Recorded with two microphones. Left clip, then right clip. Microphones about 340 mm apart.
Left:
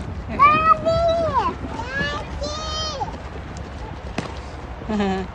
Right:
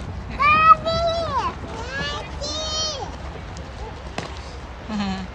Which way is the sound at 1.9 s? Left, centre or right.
Centre.